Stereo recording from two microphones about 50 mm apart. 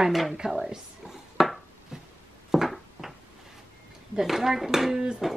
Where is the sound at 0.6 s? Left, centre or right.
Centre.